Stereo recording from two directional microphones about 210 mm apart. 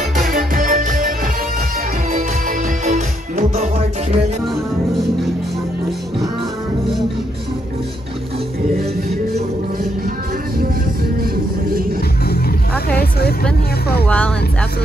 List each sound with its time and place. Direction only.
0.2 s music: 40° right (ahead or behind)
2.8 s music: 40° right (ahead or behind)
14.0 s music: 5° left (ahead or behind)